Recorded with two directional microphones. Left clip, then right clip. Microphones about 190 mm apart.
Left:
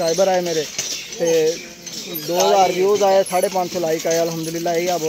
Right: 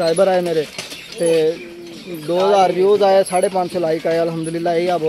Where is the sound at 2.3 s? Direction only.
20° right (ahead or behind).